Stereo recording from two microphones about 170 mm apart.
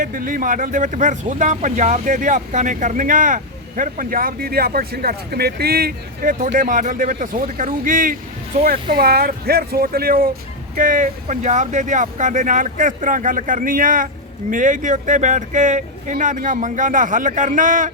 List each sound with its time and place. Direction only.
0.0 s speech: 50° right (ahead or behind)